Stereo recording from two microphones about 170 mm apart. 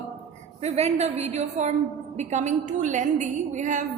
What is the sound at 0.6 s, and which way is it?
A woman's voice, 40° right (ahead or behind).